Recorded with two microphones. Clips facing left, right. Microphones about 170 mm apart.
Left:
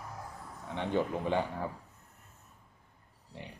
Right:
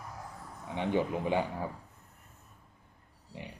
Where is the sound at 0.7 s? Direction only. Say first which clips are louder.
Right 1 dB; 15° right (ahead or behind).